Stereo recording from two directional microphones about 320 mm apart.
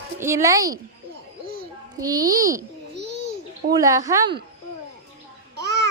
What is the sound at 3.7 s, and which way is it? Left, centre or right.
Speech, centre.